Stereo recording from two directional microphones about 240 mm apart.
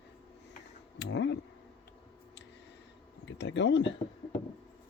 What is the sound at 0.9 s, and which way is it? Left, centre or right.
Speech, left.